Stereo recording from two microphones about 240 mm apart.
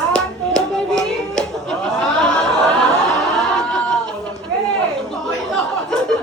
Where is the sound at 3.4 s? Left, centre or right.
Centre.